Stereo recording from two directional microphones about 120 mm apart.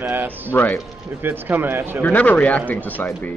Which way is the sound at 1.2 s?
15° right (ahead or behind).